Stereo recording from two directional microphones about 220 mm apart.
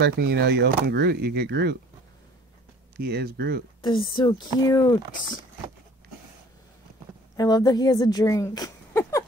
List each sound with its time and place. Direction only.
0.0 s speech: 50° right (ahead or behind)
3.0 s speech: 45° right (ahead or behind)
4.1 s speech: 20° left (ahead or behind)
7.3 s a woman's voice: 15° left (ahead or behind)